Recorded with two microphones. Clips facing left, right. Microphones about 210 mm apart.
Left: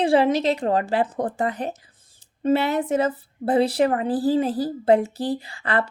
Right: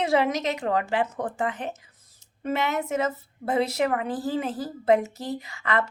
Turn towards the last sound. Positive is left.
turn(degrees=30)  # may be behind; listen again after turning